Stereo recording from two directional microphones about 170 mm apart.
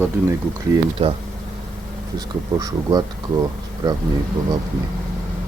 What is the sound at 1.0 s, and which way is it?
Speech, 35° right (ahead or behind).